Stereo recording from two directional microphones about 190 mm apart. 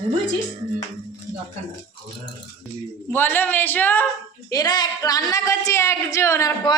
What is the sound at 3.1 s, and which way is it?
Speech, 10° left (ahead or behind).